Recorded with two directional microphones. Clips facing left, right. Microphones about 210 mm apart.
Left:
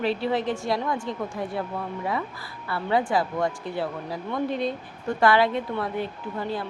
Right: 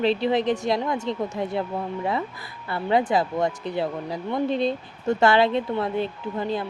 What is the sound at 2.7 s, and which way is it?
A woman's voice, 20° right (ahead or behind).